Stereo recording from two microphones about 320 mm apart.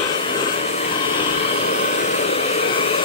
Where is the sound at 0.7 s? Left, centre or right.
Centre.